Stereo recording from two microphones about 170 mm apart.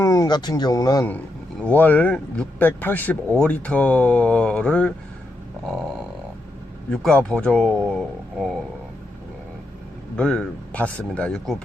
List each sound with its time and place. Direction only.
0.0 s speech: 15° left (ahead or behind)
6.9 s speech: 5° left (ahead or behind)
10.2 s speech: 5° left (ahead or behind)